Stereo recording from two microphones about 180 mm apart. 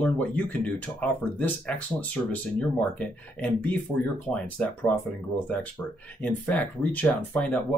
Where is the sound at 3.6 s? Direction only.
5° left (ahead or behind).